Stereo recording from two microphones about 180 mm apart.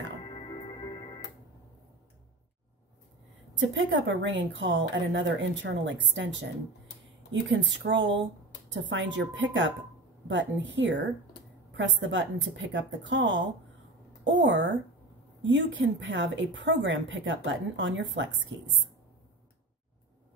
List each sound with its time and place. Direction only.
0.2 s music: 25° left (ahead or behind)
3.5 s a woman's voice: 90° right
7.4 s a woman's voice: 90° right
14.4 s a woman's voice: 90° right